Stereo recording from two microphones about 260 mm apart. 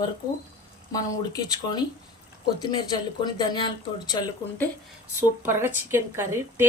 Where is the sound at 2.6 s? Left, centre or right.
Centre.